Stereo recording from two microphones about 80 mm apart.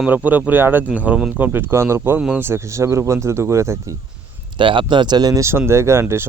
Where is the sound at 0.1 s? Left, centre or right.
Right.